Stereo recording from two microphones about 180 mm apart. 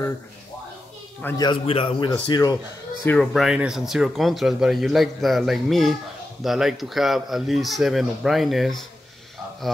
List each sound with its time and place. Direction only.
1.4 s a man's voice: 30° left (ahead or behind)
3.1 s speech: centre (ahead or behind)